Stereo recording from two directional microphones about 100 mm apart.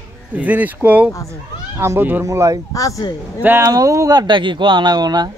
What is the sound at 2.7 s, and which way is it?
Speech, 35° left (ahead or behind).